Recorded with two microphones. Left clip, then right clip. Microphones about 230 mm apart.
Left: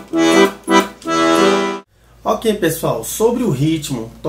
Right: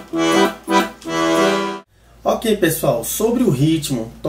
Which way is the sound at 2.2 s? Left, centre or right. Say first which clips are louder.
Left 1 dB; centre.